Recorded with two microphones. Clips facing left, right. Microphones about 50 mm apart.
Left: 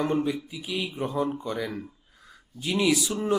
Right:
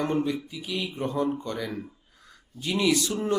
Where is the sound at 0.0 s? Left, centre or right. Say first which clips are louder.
Left 1 dB; centre.